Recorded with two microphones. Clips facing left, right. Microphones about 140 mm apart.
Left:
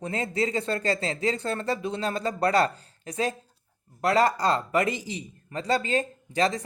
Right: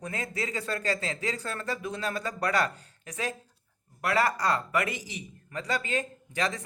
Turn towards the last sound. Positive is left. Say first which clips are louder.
# left 6 dB
turn(degrees=35)  # may be behind; listen again after turning